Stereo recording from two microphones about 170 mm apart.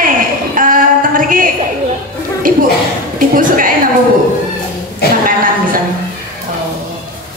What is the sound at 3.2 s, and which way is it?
Speech, 55° right (ahead or behind).